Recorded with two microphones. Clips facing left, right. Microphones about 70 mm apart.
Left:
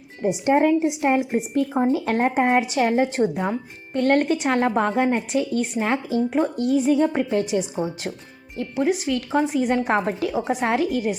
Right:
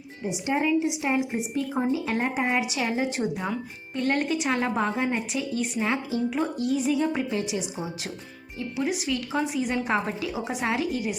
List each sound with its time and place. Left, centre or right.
0.2 s a woman's voice: left
3.2 s speech: left
3.9 s a woman's voice: left
10.4 s speech: left
10.8 s a woman's voice: left